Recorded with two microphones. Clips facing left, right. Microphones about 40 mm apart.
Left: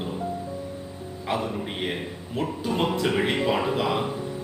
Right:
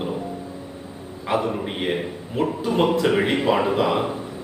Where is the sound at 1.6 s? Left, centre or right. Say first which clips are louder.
Right 5 dB; centre.